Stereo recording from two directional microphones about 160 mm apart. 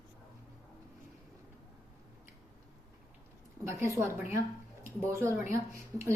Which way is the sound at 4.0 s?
15° right (ahead or behind).